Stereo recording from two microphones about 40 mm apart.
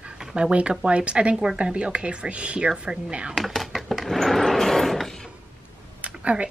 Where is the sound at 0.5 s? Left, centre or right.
Right.